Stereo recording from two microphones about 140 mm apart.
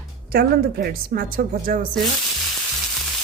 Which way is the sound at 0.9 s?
90° right.